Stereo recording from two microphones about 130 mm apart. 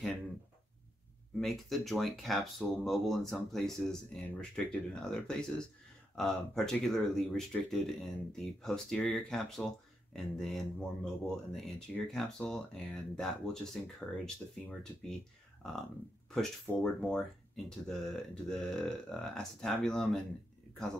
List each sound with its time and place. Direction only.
1.4 s speech: centre (ahead or behind)
16.3 s speech: 10° left (ahead or behind)